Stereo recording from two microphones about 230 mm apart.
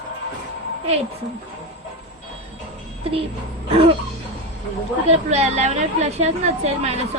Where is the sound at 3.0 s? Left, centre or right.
Right.